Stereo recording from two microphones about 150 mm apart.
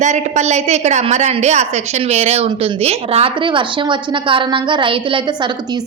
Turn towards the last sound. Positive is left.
turn(degrees=-35)  # may be behind; listen again after turning